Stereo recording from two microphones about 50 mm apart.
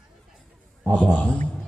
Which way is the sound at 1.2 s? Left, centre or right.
Left.